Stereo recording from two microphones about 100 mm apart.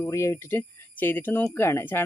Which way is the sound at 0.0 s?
30° left (ahead or behind).